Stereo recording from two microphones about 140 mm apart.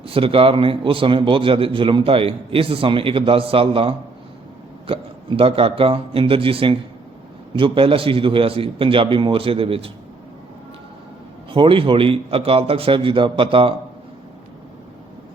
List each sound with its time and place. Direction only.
0.0 s a man's voice: 40° right (ahead or behind)
11.5 s a man's voice: 40° right (ahead or behind)